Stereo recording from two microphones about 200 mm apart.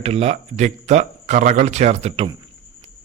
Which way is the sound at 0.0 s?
30° right (ahead or behind).